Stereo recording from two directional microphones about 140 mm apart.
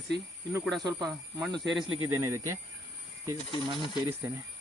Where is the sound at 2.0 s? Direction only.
20° right (ahead or behind).